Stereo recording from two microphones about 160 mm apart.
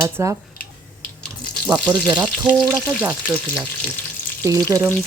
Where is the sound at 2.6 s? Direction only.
20° right (ahead or behind).